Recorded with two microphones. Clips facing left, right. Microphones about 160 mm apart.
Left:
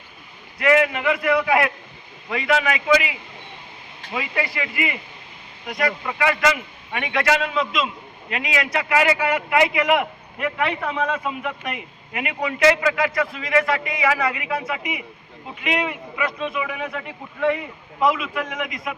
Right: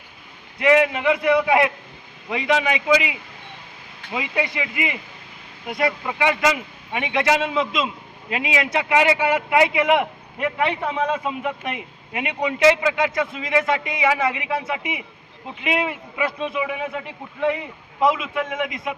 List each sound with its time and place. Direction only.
0.6 s speech: 25° right (ahead or behind)
10.8 s a man's voice: 5° right (ahead or behind)
11.1 s speech: 25° right (ahead or behind)
18.0 s speech: 25° right (ahead or behind)